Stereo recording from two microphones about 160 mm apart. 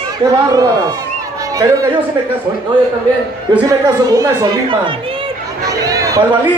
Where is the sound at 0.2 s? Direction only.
20° right (ahead or behind).